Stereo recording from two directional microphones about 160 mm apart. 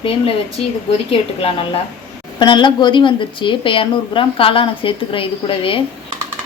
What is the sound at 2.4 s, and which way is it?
A woman's voice, 30° left (ahead or behind).